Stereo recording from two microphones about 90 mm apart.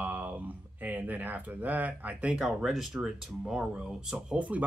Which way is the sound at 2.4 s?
5° right (ahead or behind).